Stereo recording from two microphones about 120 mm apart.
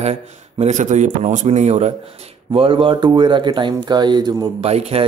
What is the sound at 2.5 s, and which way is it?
Speech, 50° right (ahead or behind).